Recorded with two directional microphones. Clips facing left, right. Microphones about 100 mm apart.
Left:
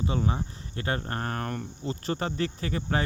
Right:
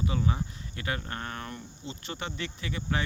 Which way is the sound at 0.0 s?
35° left (ahead or behind).